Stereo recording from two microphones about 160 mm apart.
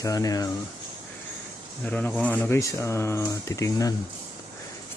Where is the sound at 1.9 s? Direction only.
10° left (ahead or behind).